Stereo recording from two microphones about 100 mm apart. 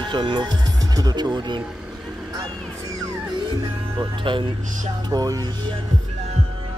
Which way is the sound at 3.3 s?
55° right (ahead or behind).